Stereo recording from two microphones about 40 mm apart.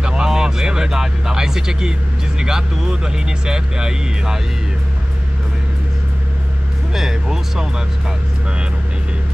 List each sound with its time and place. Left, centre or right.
0.0 s speech: centre
6.9 s speech: centre